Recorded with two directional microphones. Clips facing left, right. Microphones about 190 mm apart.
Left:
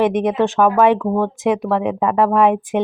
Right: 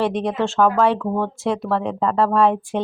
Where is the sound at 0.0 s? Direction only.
15° left (ahead or behind).